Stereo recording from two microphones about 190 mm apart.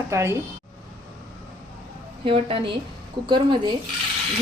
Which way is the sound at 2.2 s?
30° right (ahead or behind).